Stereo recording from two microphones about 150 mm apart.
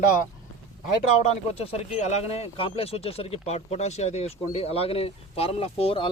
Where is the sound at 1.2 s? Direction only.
45° left (ahead or behind).